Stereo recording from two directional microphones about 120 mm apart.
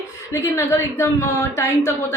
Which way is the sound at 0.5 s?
20° left (ahead or behind).